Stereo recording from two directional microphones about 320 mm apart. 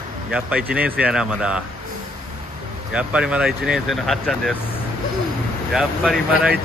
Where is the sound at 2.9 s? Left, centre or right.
Centre.